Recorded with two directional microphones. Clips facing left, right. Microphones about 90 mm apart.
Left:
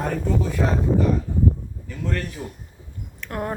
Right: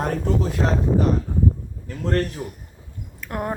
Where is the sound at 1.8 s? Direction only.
55° right (ahead or behind).